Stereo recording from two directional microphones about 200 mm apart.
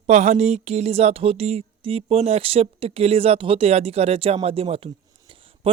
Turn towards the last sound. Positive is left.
turn(degrees=-30)  # may be behind; listen again after turning